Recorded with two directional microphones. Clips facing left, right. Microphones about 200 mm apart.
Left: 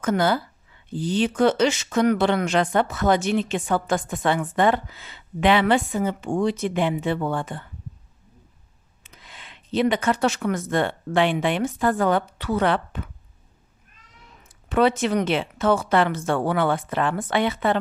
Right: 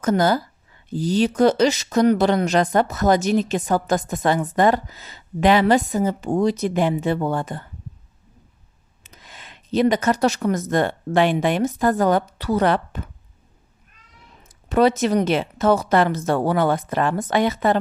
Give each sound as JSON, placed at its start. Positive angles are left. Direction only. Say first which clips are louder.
{"t": 0.0, "sound": "speech", "louder": "right 3 dB", "side_deg": -40}
{"t": 9.0, "sound": "speech", "louder": "right 2 dB", "side_deg": -45}
{"t": 14.7, "sound": "speech", "louder": "right 3 dB", "side_deg": -40}